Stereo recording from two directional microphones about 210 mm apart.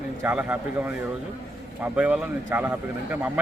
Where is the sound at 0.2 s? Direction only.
10° right (ahead or behind).